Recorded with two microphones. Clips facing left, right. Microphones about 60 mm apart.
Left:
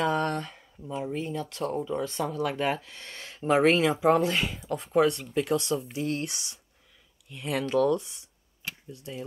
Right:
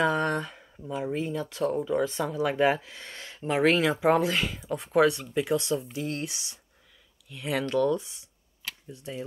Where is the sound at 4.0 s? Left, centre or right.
Centre.